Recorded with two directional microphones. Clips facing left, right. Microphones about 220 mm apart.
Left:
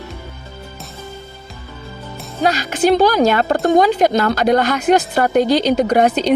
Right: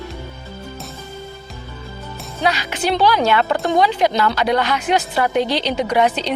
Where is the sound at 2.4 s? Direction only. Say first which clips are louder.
Left 5 dB; 45° left (ahead or behind).